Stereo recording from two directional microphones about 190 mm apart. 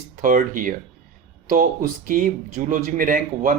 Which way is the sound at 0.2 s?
45° right (ahead or behind).